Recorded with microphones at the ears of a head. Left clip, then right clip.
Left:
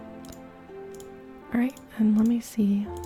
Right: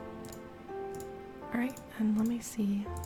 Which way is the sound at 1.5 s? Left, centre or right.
Left.